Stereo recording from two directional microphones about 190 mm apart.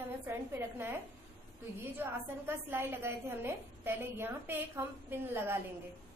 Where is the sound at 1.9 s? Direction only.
10° right (ahead or behind).